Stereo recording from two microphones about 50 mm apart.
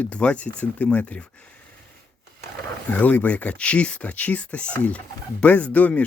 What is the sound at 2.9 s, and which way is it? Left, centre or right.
Speech, left.